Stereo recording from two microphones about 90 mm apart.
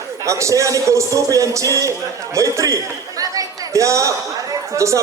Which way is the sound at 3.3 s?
35° right (ahead or behind).